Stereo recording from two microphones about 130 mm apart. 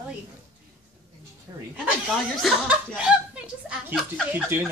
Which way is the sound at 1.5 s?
20° right (ahead or behind).